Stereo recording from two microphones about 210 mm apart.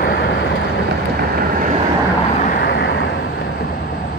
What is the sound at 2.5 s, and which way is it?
Vehicle, 50° left (ahead or behind).